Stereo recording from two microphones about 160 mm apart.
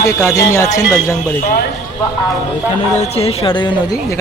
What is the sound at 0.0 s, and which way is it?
Speech, 20° left (ahead or behind).